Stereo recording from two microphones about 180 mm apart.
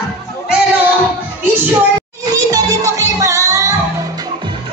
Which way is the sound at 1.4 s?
10° right (ahead or behind).